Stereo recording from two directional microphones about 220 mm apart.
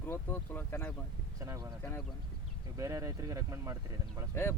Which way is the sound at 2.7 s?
15° right (ahead or behind).